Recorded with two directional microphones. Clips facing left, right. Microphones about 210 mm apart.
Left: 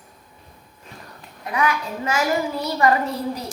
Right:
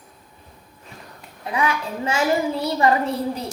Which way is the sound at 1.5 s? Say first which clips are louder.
Even; 25° right (ahead or behind).